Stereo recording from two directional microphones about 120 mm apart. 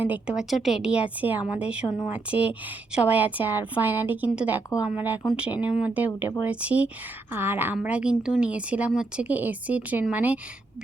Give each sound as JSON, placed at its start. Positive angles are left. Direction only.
{"t": 0.0, "sound": "a woman's voice", "side_deg": -10}